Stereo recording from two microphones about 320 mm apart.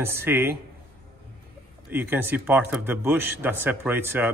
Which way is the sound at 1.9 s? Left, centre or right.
Centre.